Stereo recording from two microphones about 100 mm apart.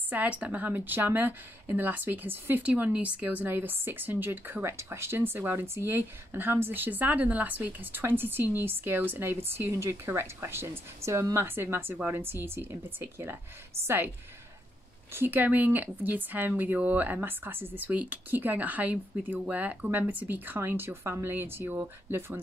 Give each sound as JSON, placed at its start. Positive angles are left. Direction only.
{"t": 0.1, "sound": "speech", "side_deg": -15}
{"t": 15.1, "sound": "speech", "side_deg": -20}